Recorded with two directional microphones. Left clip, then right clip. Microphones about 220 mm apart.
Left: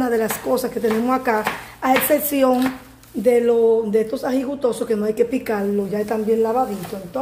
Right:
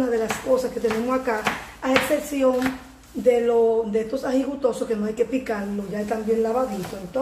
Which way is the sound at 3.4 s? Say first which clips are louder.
Left 3 dB; 40° left (ahead or behind).